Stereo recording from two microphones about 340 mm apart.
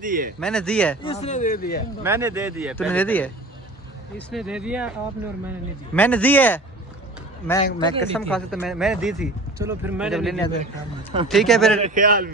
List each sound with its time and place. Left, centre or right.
0.0 s a man's voice: right
0.4 s speech: centre
1.0 s speech: centre
2.0 s speech: centre
4.3 s speech: centre
5.9 s speech: centre
8.0 s speech: centre
11.8 s a man's voice: right